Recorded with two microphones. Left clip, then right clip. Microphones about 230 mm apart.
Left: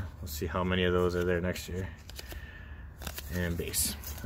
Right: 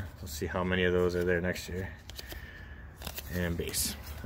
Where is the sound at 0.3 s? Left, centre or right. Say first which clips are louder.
Even; centre.